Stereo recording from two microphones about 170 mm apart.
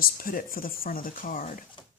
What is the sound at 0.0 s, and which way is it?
Speech, 60° left (ahead or behind).